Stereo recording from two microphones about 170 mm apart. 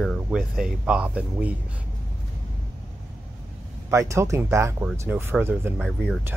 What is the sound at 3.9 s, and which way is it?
Speech, 15° right (ahead or behind).